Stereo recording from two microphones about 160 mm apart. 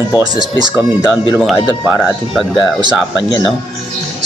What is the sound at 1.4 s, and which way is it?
Speech, centre (ahead or behind).